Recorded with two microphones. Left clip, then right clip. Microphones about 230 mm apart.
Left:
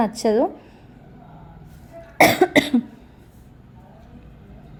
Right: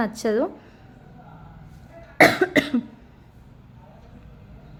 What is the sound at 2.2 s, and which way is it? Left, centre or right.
Cough, centre.